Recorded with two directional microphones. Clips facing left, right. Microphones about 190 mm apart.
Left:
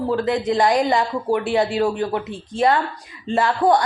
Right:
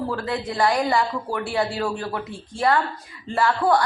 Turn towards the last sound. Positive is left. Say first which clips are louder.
# left 3 dB
turn(degrees=20)  # may be behind; listen again after turning